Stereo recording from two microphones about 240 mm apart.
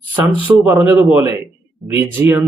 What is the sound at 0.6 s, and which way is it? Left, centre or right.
Speech, centre.